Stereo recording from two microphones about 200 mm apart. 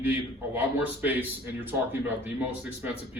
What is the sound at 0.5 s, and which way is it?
A man's voice, 10° right (ahead or behind).